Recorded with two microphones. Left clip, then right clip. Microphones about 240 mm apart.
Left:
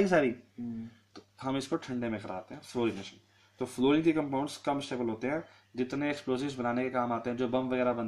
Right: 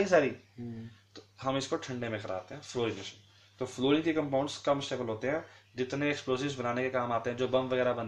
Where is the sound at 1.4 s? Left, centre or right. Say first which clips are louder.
Right 1 dB; left.